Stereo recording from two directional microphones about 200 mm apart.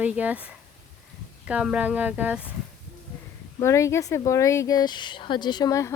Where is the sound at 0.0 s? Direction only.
5° right (ahead or behind).